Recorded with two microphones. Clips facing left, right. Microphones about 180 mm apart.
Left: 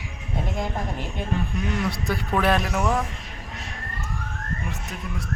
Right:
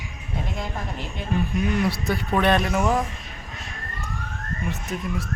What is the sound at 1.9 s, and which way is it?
Speech, centre (ahead or behind).